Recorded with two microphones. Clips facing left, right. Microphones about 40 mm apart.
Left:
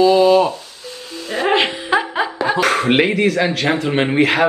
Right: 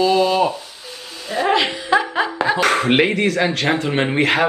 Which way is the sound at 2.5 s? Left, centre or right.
Centre.